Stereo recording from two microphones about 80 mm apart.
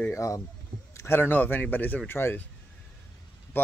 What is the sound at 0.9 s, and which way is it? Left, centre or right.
Speech, left.